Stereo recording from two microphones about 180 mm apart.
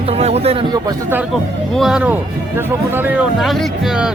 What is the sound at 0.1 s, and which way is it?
Speech, 35° right (ahead or behind).